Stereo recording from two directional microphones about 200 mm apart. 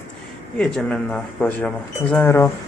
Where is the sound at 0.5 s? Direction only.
5° left (ahead or behind).